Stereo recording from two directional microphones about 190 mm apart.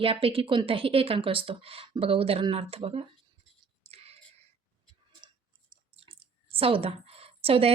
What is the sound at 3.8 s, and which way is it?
Whispering, 30° right (ahead or behind).